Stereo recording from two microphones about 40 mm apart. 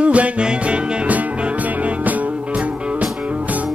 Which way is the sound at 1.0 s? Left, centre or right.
Right.